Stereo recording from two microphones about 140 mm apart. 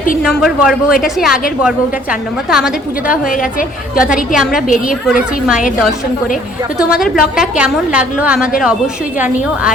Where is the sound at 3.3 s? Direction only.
75° left (ahead or behind).